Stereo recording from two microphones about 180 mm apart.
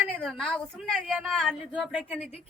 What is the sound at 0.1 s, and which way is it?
A woman's voice, centre (ahead or behind).